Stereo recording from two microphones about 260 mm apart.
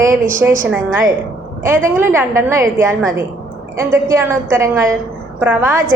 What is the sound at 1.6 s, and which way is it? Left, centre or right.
A woman's voice, centre.